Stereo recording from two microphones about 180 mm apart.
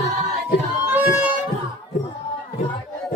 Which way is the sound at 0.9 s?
10° right (ahead or behind).